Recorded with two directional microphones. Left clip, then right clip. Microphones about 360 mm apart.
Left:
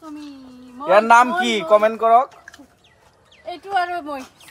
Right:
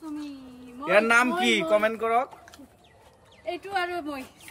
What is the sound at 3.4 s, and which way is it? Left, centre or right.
Speech, centre.